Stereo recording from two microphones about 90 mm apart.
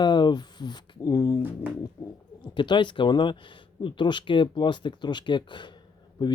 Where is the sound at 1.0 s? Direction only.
40° left (ahead or behind).